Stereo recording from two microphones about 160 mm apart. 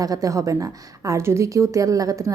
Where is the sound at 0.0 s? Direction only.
20° right (ahead or behind).